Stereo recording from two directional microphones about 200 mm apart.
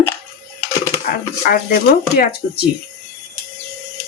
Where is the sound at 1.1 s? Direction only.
45° left (ahead or behind).